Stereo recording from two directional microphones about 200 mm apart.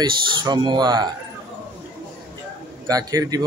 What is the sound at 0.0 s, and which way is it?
A man's voice, 20° right (ahead or behind).